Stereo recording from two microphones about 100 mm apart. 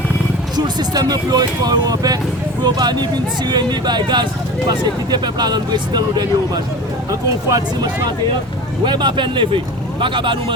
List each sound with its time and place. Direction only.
0.5 s speech: 45° right (ahead or behind)
8.8 s speech: 50° right (ahead or behind)